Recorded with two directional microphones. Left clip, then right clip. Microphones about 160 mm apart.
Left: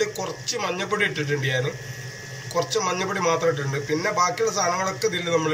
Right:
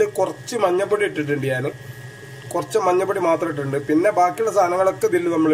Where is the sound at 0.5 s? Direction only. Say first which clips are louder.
Right 5 dB; 60° right (ahead or behind).